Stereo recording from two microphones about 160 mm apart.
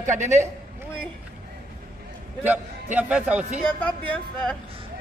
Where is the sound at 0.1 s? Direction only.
50° right (ahead or behind).